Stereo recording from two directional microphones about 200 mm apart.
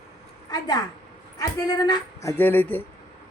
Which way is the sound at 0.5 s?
20° left (ahead or behind).